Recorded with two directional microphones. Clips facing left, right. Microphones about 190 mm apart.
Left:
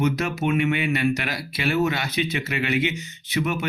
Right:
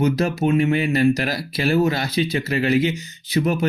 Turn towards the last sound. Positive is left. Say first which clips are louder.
# right 5 dB
turn(degrees=-35)  # may be behind; listen again after turning